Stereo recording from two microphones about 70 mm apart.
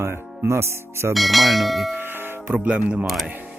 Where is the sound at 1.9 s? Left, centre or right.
Right.